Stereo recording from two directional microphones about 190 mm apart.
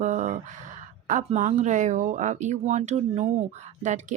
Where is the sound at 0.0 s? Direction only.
40° right (ahead or behind).